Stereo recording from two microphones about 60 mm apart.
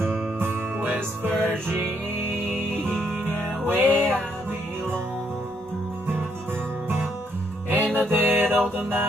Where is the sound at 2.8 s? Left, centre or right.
Centre.